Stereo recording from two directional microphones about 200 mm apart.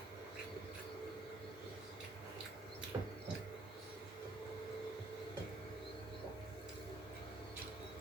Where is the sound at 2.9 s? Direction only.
15° right (ahead or behind).